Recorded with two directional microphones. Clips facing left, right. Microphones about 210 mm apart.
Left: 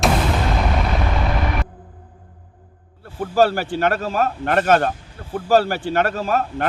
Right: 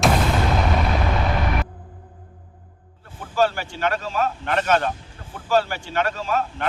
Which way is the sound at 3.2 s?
40° left (ahead or behind).